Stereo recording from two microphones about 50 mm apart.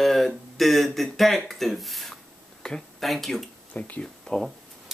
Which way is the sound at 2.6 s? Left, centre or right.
Centre.